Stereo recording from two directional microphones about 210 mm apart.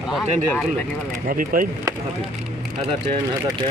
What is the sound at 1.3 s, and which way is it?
Speech, 40° right (ahead or behind).